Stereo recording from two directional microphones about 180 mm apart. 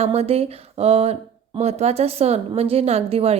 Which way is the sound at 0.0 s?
35° right (ahead or behind).